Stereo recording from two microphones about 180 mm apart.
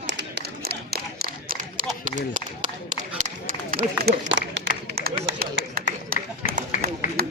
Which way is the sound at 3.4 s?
55° right (ahead or behind).